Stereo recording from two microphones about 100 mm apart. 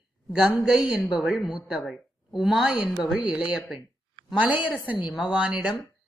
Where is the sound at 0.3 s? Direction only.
5° right (ahead or behind).